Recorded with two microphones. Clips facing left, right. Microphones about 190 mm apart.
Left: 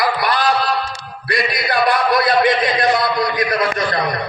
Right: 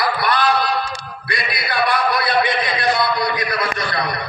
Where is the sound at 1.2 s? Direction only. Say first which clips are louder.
Left 6 dB; 40° left (ahead or behind).